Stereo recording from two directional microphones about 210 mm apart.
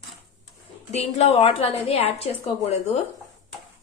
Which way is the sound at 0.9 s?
30° left (ahead or behind).